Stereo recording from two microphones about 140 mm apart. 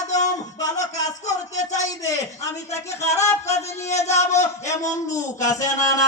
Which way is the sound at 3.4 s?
50° left (ahead or behind).